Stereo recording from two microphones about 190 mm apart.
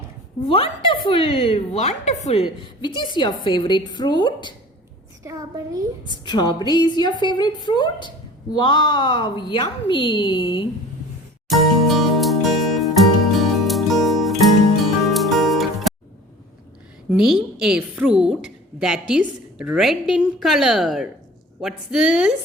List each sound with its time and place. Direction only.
0.4 s a woman's voice: 30° left (ahead or behind)
5.2 s a woman's voice: 15° right (ahead or behind)
6.1 s a woman's voice: 25° left (ahead or behind)
11.4 s music: centre (ahead or behind)
17.1 s a woman's voice: 5° right (ahead or behind)